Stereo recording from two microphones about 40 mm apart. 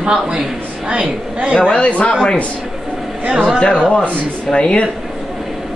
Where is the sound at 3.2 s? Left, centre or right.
Right.